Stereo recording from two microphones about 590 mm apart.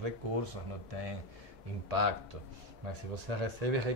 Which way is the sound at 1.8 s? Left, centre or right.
Right.